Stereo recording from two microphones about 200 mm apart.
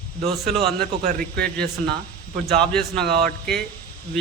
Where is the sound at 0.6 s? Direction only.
50° right (ahead or behind).